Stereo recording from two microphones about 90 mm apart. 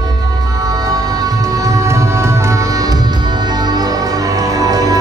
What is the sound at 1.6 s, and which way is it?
Music, 35° right (ahead or behind).